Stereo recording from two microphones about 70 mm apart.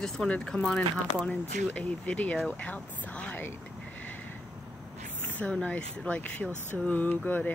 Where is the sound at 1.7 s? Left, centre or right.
Left.